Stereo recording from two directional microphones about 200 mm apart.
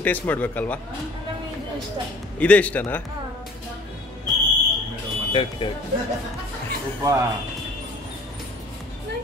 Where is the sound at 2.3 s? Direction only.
5° left (ahead or behind).